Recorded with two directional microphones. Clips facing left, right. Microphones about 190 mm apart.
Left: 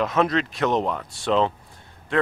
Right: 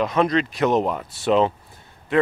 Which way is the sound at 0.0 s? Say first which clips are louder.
Right 2 dB; centre (ahead or behind).